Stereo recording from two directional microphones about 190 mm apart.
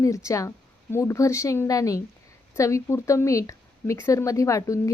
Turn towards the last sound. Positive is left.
turn(degrees=15)  # may be behind; listen again after turning